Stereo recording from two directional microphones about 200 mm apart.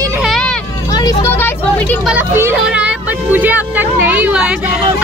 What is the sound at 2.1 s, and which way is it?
Speech, 10° right (ahead or behind).